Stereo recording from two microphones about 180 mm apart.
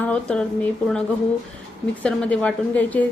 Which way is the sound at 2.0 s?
5° left (ahead or behind).